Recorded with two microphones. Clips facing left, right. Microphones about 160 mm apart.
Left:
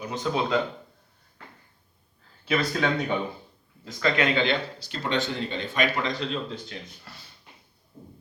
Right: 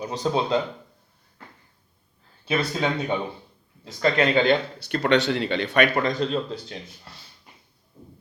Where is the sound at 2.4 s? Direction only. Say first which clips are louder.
Right 1 dB; 25° right (ahead or behind).